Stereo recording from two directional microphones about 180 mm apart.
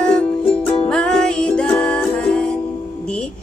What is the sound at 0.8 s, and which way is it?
Music, 5° left (ahead or behind).